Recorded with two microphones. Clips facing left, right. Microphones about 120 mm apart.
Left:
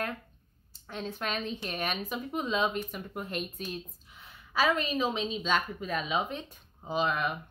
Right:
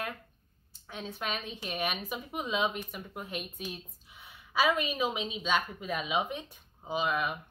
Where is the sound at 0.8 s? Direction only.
5° right (ahead or behind).